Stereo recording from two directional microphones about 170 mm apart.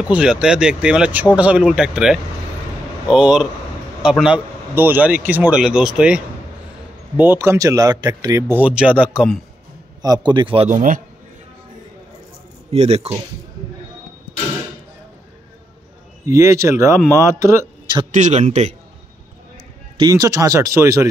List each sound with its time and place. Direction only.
0.0 s speech: 5° right (ahead or behind)
10.0 s speech: 25° right (ahead or behind)
10.7 s a man's voice: 50° right (ahead or behind)
12.7 s speech: 40° right (ahead or behind)
16.3 s a man's voice: 15° right (ahead or behind)
18.1 s a man's voice: 45° right (ahead or behind)
20.0 s speech: 20° right (ahead or behind)